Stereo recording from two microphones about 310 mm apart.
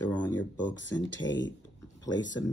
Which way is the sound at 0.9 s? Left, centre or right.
Centre.